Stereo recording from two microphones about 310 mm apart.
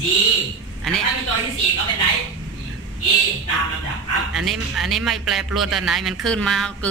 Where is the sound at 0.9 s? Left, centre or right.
Centre.